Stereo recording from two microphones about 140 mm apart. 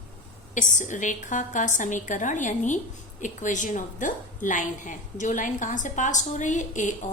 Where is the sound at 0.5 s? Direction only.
65° left (ahead or behind).